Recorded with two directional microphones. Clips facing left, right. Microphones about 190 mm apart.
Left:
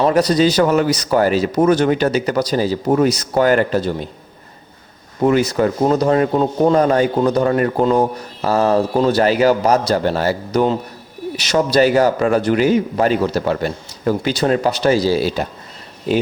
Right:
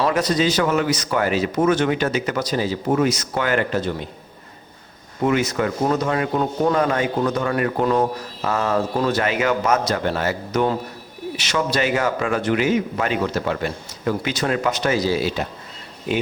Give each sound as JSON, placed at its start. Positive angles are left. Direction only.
{"t": 0.0, "sound": "a man's voice", "side_deg": 35}
{"t": 5.2, "sound": "a man's voice", "side_deg": 35}